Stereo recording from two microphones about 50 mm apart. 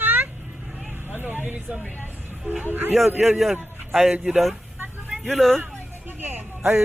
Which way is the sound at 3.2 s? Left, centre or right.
Centre.